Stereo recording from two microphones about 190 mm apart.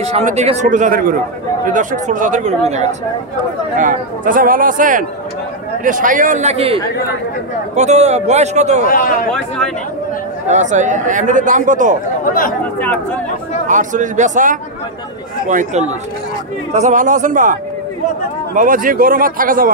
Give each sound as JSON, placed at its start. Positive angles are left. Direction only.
{"t": 0.0, "sound": "a man's voice", "side_deg": -35}
{"t": 8.8, "sound": "a man's voice", "side_deg": 50}
{"t": 10.5, "sound": "a man's voice", "side_deg": -40}
{"t": 13.7, "sound": "a man's voice", "side_deg": -40}